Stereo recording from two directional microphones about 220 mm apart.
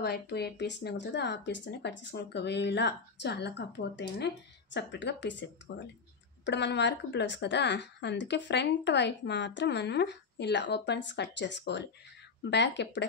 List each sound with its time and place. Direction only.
0.0 s speech: 45° left (ahead or behind)